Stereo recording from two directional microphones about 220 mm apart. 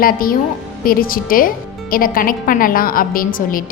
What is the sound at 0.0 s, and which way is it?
A woman's voice, 40° left (ahead or behind).